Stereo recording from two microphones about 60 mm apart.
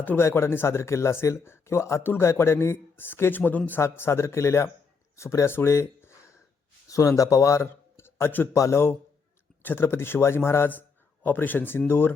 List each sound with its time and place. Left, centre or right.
0.2 s speech: left
3.8 s speech: left
5.5 s speech: left
6.9 s speech: left
7.6 s a sound: left
8.5 s speech: left
9.6 s speech: left
10.7 s speech: left